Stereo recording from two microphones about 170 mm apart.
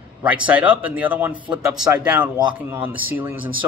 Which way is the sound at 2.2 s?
25° right (ahead or behind).